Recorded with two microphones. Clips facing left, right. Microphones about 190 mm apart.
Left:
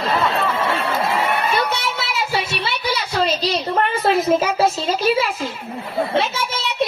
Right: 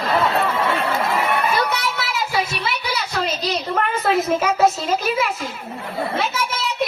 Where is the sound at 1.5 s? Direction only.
25° left (ahead or behind).